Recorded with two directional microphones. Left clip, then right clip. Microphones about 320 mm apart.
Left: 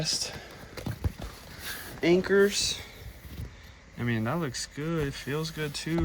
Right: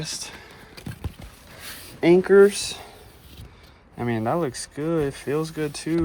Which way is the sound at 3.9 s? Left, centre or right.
Centre.